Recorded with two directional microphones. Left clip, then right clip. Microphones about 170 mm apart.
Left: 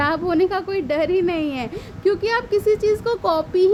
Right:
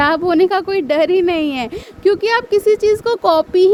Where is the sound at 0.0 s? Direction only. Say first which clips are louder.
Right 6 dB; 45° right (ahead or behind).